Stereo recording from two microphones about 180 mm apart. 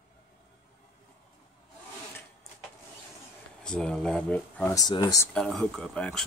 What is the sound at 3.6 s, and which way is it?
Speech, 5° left (ahead or behind).